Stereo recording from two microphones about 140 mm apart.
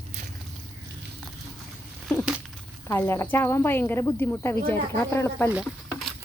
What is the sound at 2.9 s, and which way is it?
Speech, 20° left (ahead or behind).